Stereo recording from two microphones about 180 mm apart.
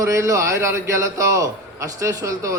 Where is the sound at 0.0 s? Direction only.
15° right (ahead or behind).